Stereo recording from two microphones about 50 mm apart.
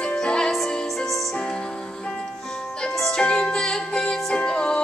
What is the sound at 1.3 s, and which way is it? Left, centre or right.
Music, centre.